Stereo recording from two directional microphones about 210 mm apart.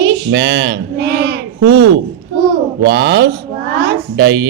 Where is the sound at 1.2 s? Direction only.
55° right (ahead or behind).